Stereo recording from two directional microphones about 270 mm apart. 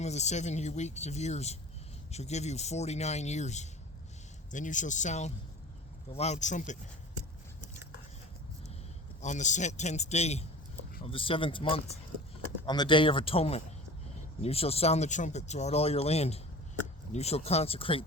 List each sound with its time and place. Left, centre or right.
0.0 s speech: left
9.2 s speech: left